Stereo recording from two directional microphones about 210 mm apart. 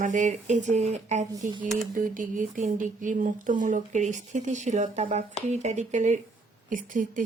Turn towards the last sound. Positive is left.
turn(degrees=-40)  # may be behind; listen again after turning